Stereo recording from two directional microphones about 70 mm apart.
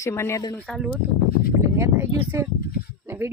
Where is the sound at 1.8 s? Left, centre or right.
Right.